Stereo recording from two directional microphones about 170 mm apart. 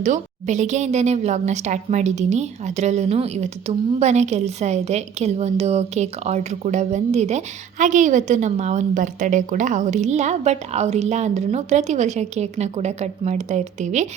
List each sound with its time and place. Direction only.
0.0 s a woman's voice: 45° right (ahead or behind)